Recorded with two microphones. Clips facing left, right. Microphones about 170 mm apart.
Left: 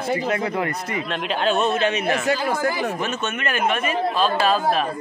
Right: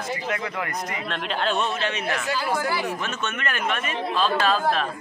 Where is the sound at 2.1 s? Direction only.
50° left (ahead or behind).